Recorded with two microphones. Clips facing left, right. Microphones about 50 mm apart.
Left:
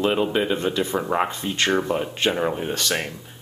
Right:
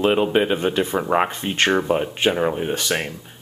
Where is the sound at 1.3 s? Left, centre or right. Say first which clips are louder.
Right 3 dB; right.